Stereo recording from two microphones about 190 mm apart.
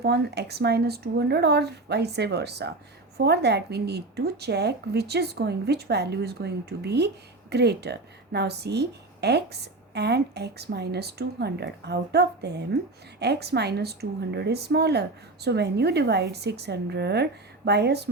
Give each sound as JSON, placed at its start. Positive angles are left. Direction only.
{"t": 0.0, "sound": "a woman's voice", "side_deg": -60}